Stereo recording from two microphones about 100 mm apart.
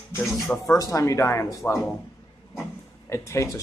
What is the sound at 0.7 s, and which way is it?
Speech, 30° left (ahead or behind).